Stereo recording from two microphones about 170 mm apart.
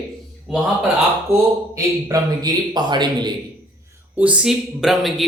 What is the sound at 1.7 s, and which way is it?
Speech, 20° right (ahead or behind).